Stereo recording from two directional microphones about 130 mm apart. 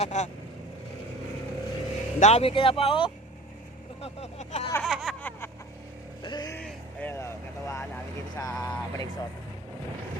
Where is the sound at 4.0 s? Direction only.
55° left (ahead or behind).